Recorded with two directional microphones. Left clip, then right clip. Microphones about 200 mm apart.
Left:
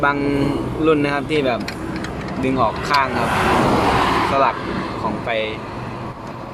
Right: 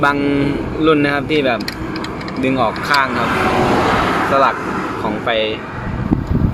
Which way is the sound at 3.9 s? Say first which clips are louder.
Right 1 dB; 50° right (ahead or behind).